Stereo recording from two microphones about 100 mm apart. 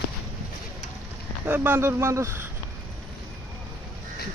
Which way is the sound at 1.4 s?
20° right (ahead or behind).